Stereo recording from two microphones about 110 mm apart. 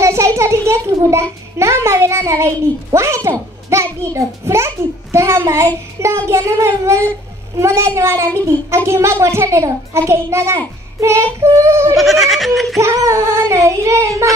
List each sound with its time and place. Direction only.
0.0 s a sound: 25° right (ahead or behind)
0.7 s a child's voice: 25° right (ahead or behind)
12.0 s goat: centre (ahead or behind)
12.7 s a child's voice: 30° right (ahead or behind)